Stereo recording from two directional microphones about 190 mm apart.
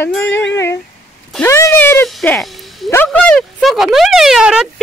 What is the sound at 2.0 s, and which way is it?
Speech, centre (ahead or behind).